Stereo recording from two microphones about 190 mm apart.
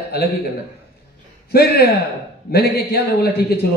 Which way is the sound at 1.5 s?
55° left (ahead or behind).